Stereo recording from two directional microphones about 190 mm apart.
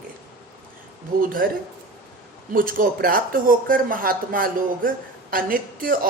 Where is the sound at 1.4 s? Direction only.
50° right (ahead or behind).